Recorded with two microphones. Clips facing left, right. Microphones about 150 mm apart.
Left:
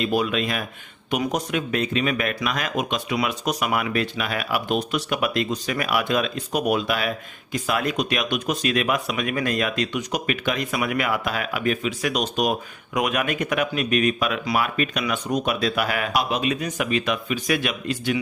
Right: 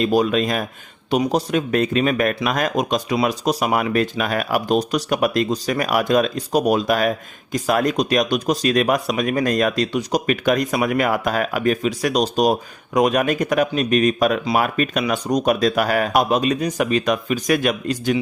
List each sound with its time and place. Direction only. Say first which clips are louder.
0.0 s speech: right 5 dB; 40° right (ahead or behind)